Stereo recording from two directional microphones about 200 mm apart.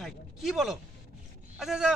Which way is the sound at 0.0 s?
Centre (ahead or behind).